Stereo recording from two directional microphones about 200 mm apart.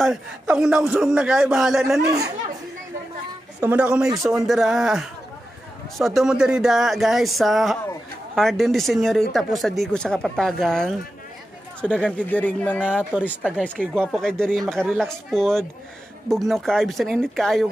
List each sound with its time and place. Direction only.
0.0 s speech: 5° right (ahead or behind)
2.0 s speech: 15° right (ahead or behind)
3.6 s speech: 5° right (ahead or behind)
12.8 s speech: 5° right (ahead or behind)